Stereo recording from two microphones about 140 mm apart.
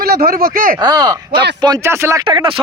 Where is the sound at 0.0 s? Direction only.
90° right.